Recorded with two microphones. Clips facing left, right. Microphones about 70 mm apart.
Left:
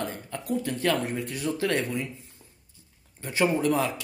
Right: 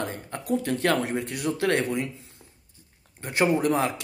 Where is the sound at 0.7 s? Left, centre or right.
Right.